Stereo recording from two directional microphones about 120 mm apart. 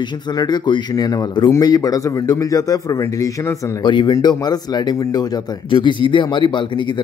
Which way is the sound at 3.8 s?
40° left (ahead or behind).